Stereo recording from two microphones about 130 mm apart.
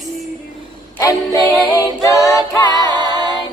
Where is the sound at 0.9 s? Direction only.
25° left (ahead or behind).